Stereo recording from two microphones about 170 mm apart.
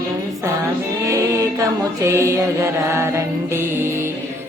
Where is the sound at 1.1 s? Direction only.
20° right (ahead or behind).